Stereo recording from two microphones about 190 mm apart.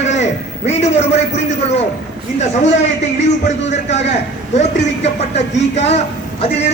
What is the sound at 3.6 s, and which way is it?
Speech, 35° left (ahead or behind).